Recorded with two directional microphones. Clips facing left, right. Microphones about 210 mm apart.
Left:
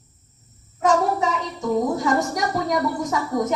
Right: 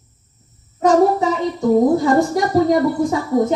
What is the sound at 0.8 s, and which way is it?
A child's voice, 35° right (ahead or behind).